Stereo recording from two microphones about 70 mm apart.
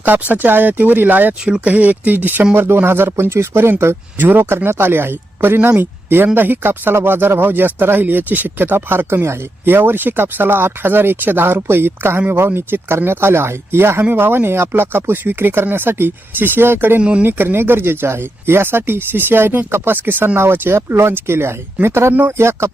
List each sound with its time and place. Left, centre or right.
0.0 s speech: right
17.0 s speech: centre
17.2 s speech: right